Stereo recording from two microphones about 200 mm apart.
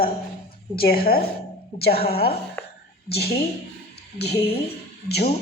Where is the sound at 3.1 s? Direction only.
50° left (ahead or behind).